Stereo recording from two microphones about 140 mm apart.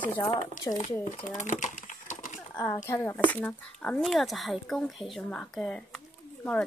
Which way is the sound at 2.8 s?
20° left (ahead or behind).